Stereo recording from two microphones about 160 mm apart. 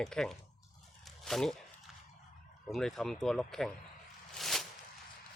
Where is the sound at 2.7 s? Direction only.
Centre (ahead or behind).